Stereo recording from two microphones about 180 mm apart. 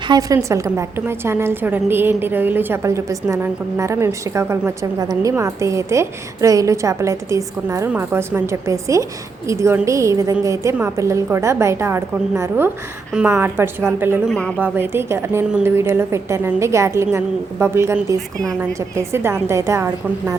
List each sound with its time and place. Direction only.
0.1 s a woman's voice: 20° right (ahead or behind)
14.3 s speech: 5° left (ahead or behind)
14.6 s a woman's voice: 15° right (ahead or behind)